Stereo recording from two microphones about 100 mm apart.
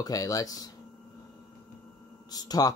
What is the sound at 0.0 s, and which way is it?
Speech, 40° left (ahead or behind).